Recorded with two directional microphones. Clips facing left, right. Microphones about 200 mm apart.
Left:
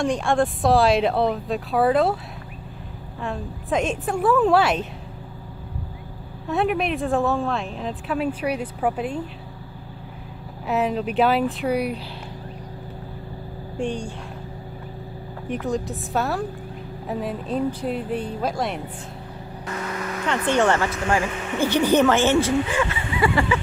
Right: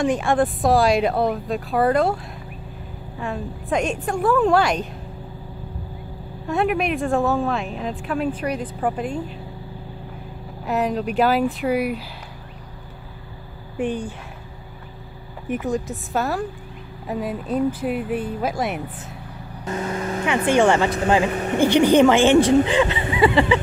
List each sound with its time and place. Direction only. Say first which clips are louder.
0.0 s speech: right 2 dB; centre (ahead or behind)
3.2 s speech: right 1 dB; centre (ahead or behind)
6.5 s speech: right 1 dB; centre (ahead or behind)
10.7 s speech: right 1 dB; centre (ahead or behind)
13.7 s a woman's voice: right 2 dB; 5° right (ahead or behind)
15.4 s speech: right 2 dB; centre (ahead or behind)
19.6 s vehicle: right 4 dB; 25° right (ahead or behind)
20.2 s a woman's voice: right 3 dB; 10° right (ahead or behind)
21.3 s speech: right 6 dB; 40° right (ahead or behind)
21.6 s a woman's voice: right 4 dB; 15° right (ahead or behind)